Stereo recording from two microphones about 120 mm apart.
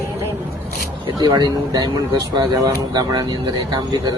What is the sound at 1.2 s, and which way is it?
Speech, 35° right (ahead or behind).